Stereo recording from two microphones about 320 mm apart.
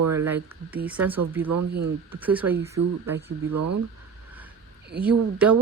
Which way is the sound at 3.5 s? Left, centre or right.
Right.